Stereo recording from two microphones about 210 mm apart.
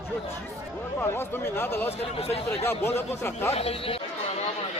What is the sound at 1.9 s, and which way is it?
Speech, 30° left (ahead or behind).